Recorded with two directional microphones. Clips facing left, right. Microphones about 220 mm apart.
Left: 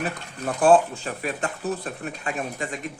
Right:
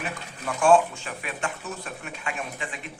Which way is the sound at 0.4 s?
35° left (ahead or behind).